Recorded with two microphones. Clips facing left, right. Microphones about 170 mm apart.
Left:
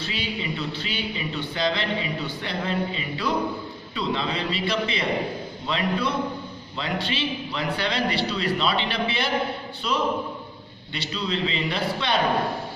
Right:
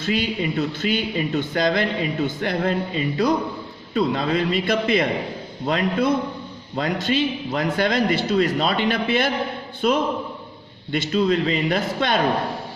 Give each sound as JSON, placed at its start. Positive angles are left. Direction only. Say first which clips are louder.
{"t": 0.0, "sound": "a man's voice", "louder": "right 7 dB", "side_deg": -50}